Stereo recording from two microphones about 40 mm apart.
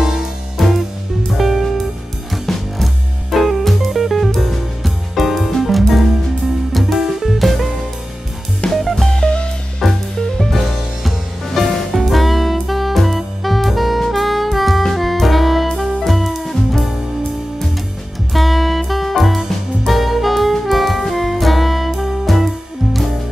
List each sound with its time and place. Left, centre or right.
0.6 s music: centre
9.0 s music: left
9.8 s music: centre
18.3 s music: centre
19.9 s saxophone: centre